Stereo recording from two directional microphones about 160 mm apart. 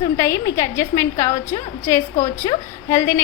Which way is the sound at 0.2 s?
15° left (ahead or behind).